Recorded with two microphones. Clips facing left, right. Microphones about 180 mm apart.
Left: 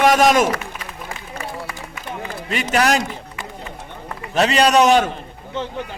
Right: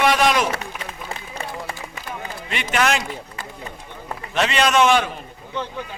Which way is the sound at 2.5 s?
40° left (ahead or behind).